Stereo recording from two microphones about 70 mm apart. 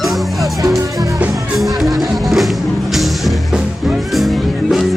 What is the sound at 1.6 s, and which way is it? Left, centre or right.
Music, centre.